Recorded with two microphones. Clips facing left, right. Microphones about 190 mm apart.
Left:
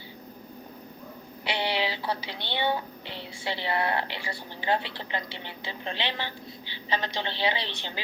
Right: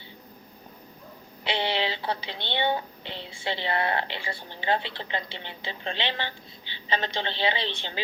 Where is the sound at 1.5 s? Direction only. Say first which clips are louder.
Right 1 dB; 20° right (ahead or behind).